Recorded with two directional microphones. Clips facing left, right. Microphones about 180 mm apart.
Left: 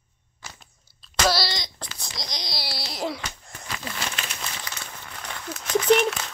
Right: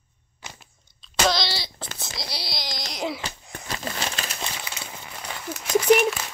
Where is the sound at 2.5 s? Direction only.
5° left (ahead or behind).